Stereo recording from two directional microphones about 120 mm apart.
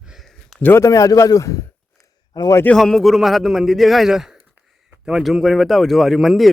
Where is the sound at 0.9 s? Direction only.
30° left (ahead or behind).